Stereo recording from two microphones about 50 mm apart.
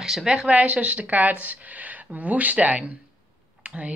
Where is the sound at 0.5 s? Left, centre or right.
Right.